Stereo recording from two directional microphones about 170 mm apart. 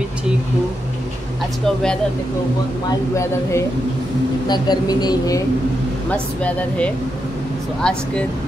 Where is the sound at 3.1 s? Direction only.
15° left (ahead or behind).